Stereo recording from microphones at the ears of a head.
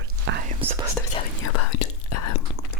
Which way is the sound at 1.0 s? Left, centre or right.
Left.